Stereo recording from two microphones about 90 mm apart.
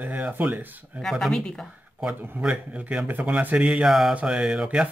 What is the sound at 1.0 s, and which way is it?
Speech, 5° left (ahead or behind).